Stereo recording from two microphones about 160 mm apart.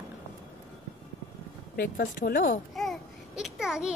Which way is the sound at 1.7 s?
60° left (ahead or behind).